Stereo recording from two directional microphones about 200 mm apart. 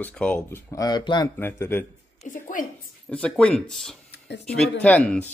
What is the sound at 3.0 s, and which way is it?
Speech, 5° left (ahead or behind).